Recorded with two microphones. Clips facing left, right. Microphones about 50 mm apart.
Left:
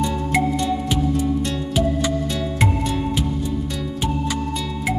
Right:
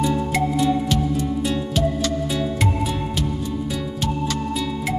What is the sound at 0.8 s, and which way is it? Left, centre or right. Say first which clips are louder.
Music: left 1 dB; centre.